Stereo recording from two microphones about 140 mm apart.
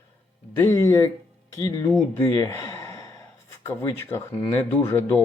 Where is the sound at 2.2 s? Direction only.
25° left (ahead or behind).